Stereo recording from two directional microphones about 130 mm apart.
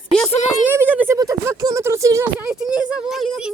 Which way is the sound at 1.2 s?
25° right (ahead or behind).